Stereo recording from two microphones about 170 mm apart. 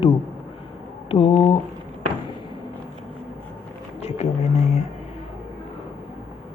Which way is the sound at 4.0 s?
40° left (ahead or behind).